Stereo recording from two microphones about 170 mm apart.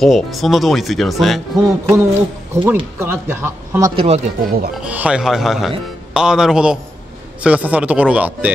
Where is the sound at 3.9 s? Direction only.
35° right (ahead or behind).